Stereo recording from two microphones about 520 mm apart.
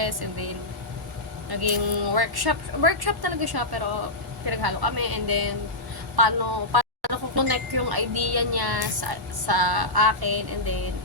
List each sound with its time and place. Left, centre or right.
0.0 s a woman's voice: right